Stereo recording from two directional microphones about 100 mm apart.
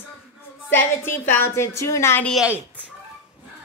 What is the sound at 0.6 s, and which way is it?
A woman's voice, 25° left (ahead or behind).